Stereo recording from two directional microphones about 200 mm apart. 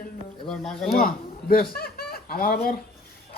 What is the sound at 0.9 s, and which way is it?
A man's voice, 45° left (ahead or behind).